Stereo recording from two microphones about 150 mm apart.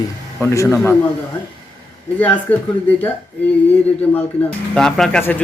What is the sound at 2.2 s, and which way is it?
Speech, 10° left (ahead or behind).